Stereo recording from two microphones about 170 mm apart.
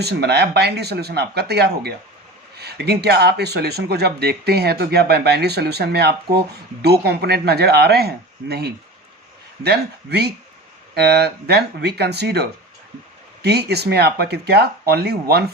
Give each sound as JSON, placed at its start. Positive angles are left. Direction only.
{"t": 0.0, "sound": "speech", "side_deg": -75}